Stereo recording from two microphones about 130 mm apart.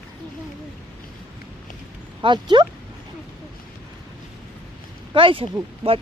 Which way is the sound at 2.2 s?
35° right (ahead or behind).